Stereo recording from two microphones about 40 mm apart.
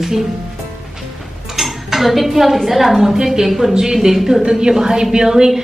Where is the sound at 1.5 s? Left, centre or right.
Centre.